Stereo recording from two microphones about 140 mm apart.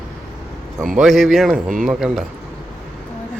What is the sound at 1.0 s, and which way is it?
Speech, centre (ahead or behind).